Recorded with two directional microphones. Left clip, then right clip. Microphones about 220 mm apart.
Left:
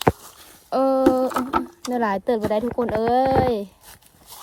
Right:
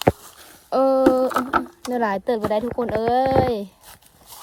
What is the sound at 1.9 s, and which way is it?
Speech, 10° right (ahead or behind).